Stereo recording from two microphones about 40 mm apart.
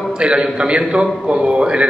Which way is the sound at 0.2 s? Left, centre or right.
Right.